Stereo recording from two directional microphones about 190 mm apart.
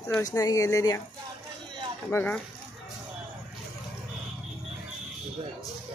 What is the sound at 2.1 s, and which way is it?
Speech, 5° left (ahead or behind).